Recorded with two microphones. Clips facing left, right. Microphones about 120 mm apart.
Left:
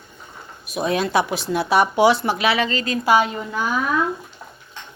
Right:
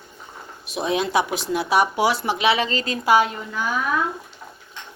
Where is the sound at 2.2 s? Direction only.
20° right (ahead or behind).